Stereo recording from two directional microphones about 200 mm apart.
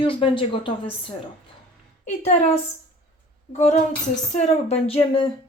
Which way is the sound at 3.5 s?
35° left (ahead or behind).